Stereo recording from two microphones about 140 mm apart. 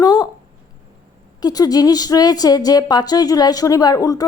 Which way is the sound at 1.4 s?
30° left (ahead or behind).